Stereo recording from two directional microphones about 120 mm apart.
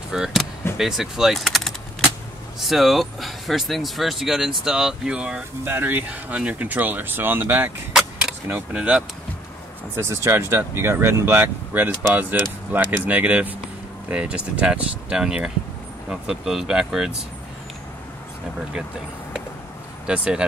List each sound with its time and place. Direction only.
0.1 s speech: 5° right (ahead or behind)
0.7 s keys jangling: 5° right (ahead or behind)
2.6 s speech: centre (ahead or behind); by 7.7 s 15° right (ahead or behind)
7.9 s vehicle: 5° right (ahead or behind)
8.5 s speech: 10° right (ahead or behind)
9.9 s speech: 20° right (ahead or behind); by 17.1 s 5° right (ahead or behind)
20.1 s speech: 10° right (ahead or behind)